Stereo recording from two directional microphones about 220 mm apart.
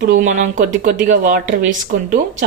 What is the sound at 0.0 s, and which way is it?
Speech, 40° right (ahead or behind).